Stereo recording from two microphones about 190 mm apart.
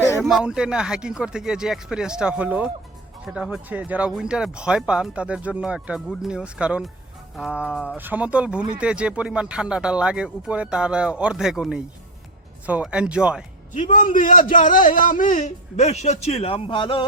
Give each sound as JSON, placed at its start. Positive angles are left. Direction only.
{"t": 0.2, "sound": "speech", "side_deg": -5}
{"t": 13.7, "sound": "a man's voice", "side_deg": 40}